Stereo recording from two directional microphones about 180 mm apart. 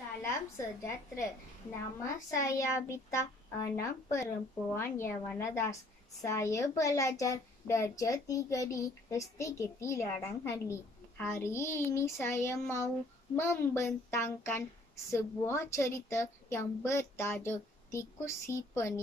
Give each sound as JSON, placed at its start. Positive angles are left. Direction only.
{"t": 0.2, "sound": "a woman's voice", "side_deg": 15}